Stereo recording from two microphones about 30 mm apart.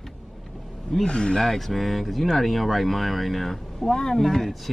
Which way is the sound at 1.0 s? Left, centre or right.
Left.